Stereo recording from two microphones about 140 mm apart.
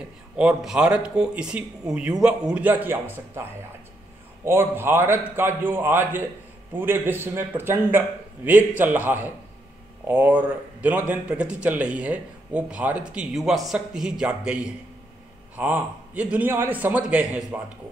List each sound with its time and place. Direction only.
0.4 s speech: 5° right (ahead or behind)
4.5 s speech: 15° right (ahead or behind)